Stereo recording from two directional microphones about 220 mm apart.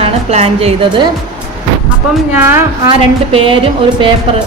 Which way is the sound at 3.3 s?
25° right (ahead or behind).